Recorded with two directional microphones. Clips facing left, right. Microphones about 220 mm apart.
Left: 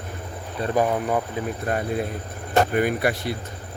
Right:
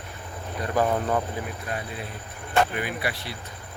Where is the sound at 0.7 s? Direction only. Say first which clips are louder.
Left 2 dB; 10° left (ahead or behind).